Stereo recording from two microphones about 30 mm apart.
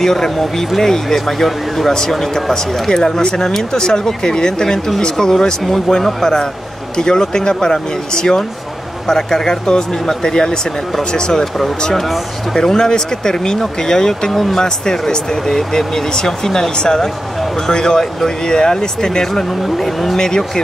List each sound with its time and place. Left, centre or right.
0.0 s speech: centre
2.9 s speech: left
3.3 s speech: centre
12.5 s speech: centre
14.3 s speech: centre
14.6 s speech: left
16.3 s speech: centre
16.7 s speech: left
19.6 s speech: centre
20.2 s speech: left